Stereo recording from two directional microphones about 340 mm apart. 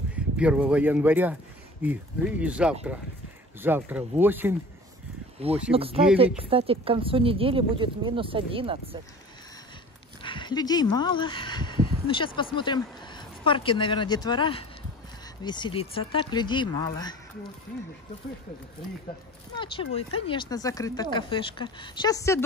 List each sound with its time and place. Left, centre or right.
0.1 s speech: centre
5.7 s speech: centre
10.2 s speech: centre
19.6 s speech: centre